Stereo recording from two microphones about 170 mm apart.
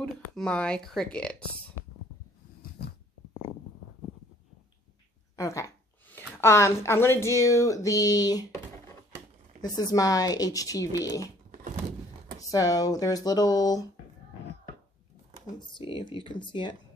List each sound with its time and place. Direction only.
0.0 s speech: 5° left (ahead or behind)
2.8 s a sound: 75° left (ahead or behind)
5.3 s speech: 20° left (ahead or behind)
12.4 s speech: 20° left (ahead or behind)
15.6 s speech: 30° left (ahead or behind)